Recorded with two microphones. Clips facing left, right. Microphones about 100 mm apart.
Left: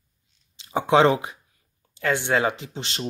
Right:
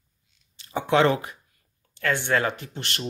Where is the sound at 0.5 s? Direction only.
20° left (ahead or behind).